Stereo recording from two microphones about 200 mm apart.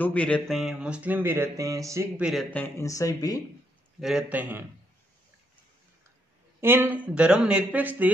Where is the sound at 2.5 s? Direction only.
10° left (ahead or behind).